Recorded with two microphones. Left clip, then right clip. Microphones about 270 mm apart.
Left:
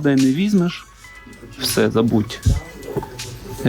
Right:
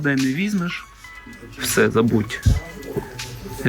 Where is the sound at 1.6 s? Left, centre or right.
Centre.